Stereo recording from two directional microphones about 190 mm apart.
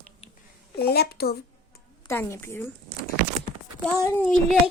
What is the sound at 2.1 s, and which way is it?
Speech, 15° left (ahead or behind).